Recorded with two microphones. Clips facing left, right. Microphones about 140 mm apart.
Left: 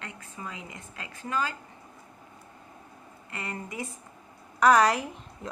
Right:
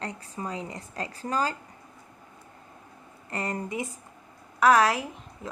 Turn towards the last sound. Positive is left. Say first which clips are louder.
# even
turn(degrees=0)  # may be behind; listen again after turning